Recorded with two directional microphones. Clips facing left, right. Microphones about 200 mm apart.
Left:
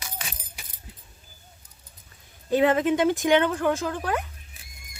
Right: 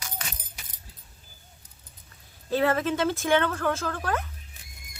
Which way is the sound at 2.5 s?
15° left (ahead or behind).